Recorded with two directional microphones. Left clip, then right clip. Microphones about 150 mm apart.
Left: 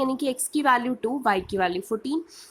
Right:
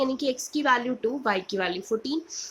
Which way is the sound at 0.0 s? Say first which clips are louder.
Even; 50° left (ahead or behind).